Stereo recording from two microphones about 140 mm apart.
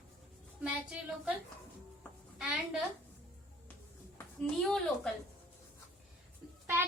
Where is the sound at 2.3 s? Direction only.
5° right (ahead or behind).